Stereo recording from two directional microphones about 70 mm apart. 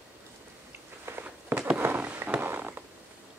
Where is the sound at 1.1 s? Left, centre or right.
Right.